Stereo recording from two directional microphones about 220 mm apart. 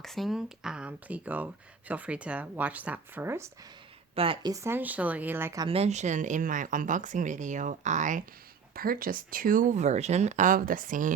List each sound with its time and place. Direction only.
0.0 s speech: centre (ahead or behind)
4.1 s speech: 25° right (ahead or behind)
5.6 s speech: 25° right (ahead or behind)